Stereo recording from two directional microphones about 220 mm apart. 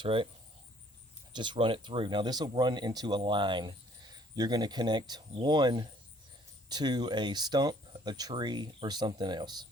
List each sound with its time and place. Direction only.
0.0 s speech: 25° right (ahead or behind)
1.3 s speech: 20° right (ahead or behind)